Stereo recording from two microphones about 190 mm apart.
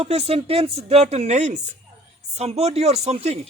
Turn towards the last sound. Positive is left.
turn(degrees=-35)  # may be behind; listen again after turning